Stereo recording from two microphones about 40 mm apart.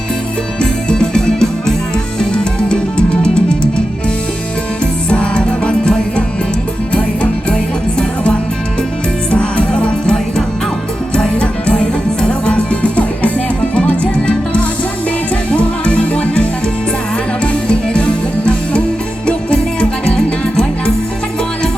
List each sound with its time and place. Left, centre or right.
0.6 s music: left
4.8 s music: left
9.4 s music: left